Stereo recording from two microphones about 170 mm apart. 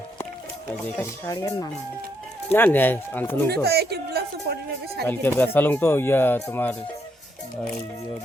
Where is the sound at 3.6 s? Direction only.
70° right (ahead or behind).